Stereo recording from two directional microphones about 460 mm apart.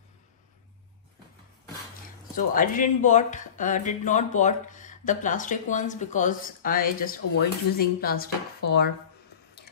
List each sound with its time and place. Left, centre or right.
2.3 s speech: centre